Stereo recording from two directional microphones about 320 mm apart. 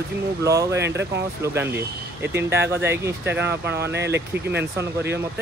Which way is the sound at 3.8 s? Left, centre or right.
Right.